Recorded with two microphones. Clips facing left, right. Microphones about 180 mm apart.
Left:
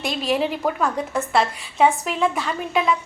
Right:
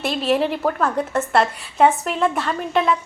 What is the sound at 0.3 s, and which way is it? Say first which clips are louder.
A woman's voice: right 2 dB; centre (ahead or behind).